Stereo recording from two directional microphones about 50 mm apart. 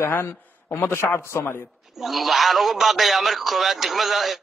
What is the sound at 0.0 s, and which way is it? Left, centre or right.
A man's voice, left.